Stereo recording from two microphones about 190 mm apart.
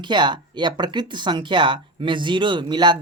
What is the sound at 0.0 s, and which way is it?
Speech, 25° right (ahead or behind).